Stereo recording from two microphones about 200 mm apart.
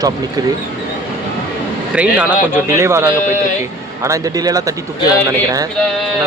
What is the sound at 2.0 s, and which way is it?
Speech, 5° right (ahead or behind).